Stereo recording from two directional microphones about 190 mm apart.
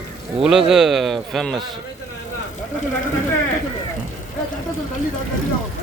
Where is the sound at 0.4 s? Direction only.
5° right (ahead or behind).